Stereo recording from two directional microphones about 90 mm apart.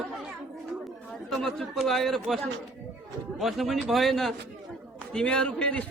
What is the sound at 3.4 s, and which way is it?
A man's voice, centre (ahead or behind).